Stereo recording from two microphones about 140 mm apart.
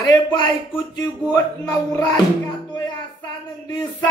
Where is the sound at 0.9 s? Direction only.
25° left (ahead or behind).